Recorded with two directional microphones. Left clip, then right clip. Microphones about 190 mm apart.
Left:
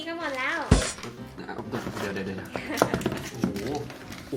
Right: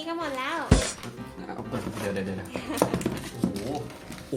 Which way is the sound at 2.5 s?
10° right (ahead or behind).